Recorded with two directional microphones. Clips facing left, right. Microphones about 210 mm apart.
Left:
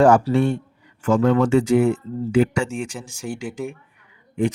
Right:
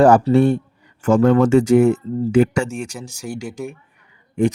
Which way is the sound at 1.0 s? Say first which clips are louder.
Right 4 dB; 50° right (ahead or behind).